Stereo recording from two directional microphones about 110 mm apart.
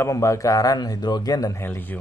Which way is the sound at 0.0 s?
25° left (ahead or behind).